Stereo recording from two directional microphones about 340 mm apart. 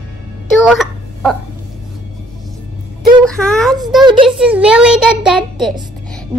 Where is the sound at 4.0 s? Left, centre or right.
Centre.